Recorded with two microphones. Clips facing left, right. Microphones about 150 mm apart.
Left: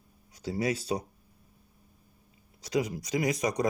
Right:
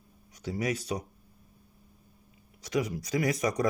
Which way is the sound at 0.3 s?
30° left (ahead or behind).